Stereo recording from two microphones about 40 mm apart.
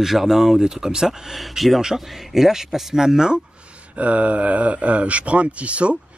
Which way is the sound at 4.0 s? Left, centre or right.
Right.